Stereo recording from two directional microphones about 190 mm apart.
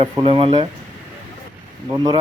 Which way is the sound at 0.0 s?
30° right (ahead or behind).